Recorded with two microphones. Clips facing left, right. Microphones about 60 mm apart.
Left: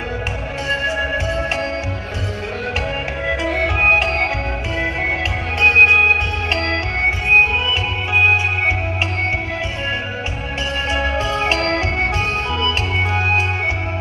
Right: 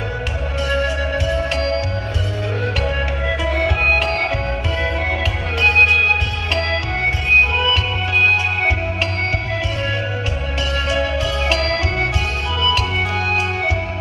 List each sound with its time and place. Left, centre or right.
0.7 s music: left
3.2 s music: centre
5.5 s music: left
7.3 s music: left
10.8 s music: left